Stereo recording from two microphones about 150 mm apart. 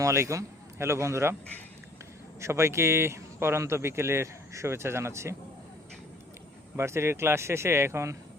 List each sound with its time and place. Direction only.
0.0 s a man's voice: 20° right (ahead or behind)
2.4 s speech: 15° right (ahead or behind)
6.7 s speech: 15° right (ahead or behind)